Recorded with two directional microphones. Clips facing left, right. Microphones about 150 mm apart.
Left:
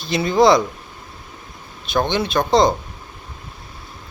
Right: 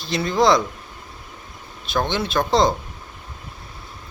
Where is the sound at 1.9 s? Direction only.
Centre (ahead or behind).